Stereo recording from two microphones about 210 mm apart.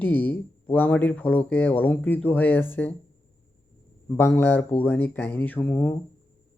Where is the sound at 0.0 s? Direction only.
10° left (ahead or behind).